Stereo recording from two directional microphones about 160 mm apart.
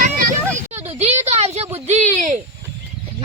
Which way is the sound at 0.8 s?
45° right (ahead or behind).